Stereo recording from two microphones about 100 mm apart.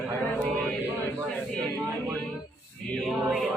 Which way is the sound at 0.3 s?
15° left (ahead or behind).